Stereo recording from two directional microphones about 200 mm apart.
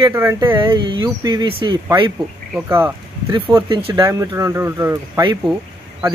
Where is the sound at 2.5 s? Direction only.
10° right (ahead or behind).